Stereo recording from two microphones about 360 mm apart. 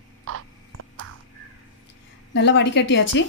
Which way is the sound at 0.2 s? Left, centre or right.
Right.